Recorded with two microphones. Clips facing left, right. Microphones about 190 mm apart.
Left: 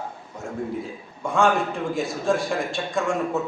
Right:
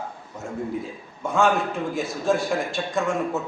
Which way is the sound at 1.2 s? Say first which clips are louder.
Even; centre (ahead or behind).